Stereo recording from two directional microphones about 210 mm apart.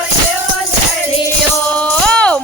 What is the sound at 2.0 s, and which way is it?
Music, 5° left (ahead or behind).